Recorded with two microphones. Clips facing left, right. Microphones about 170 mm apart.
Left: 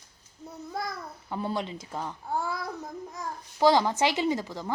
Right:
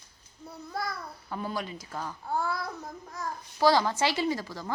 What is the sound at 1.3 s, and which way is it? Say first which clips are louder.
A child's voice: left 3 dB; 25° left (ahead or behind).